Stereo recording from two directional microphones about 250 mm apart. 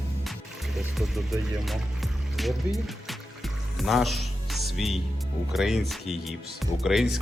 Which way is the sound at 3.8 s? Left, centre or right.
Centre.